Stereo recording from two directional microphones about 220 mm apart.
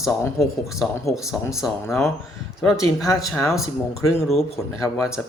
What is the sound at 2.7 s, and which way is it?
Speech, 15° left (ahead or behind).